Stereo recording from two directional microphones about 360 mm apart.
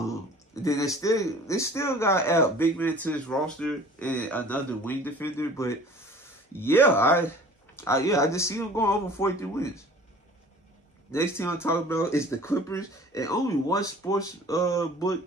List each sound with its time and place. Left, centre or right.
0.6 s a man's voice: centre
11.1 s a man's voice: centre